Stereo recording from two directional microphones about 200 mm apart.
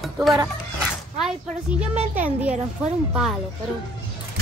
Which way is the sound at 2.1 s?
10° right (ahead or behind).